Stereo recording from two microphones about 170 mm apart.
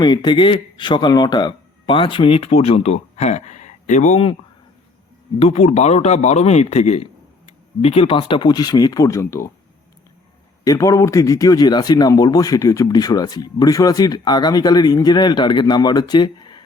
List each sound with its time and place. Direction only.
0.0 s speech: 25° left (ahead or behind)
5.4 s a man's voice: 40° left (ahead or behind); by 9.5 s 15° left (ahead or behind)
10.6 s a man's voice: 20° left (ahead or behind)